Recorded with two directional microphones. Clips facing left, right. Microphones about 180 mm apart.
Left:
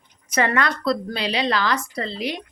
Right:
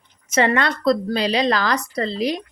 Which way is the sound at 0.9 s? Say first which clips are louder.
Right 5 dB; 40° right (ahead or behind).